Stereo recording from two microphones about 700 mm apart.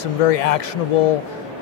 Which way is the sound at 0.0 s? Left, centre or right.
Left.